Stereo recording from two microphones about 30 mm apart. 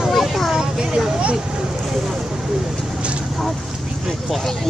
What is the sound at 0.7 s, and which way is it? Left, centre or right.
Vehicle, right.